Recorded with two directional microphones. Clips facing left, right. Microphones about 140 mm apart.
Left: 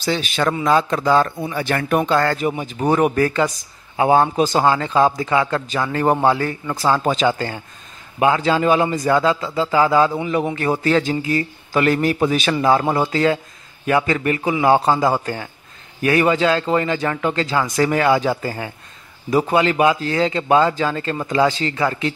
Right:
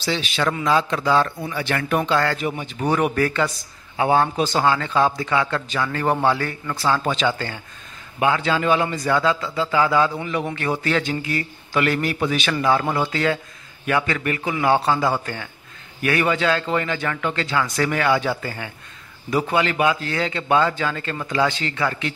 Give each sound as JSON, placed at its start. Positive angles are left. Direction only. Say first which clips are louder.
{"t": 0.0, "sound": "a man's voice", "louder": "left 3 dB", "side_deg": 45}
{"t": 4.4, "sound": "a man's voice", "louder": "left 3 dB", "side_deg": 40}